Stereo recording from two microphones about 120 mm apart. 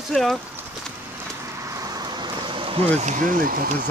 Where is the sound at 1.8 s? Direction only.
30° right (ahead or behind).